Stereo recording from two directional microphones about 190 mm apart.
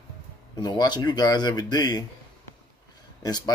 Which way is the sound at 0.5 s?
20° left (ahead or behind).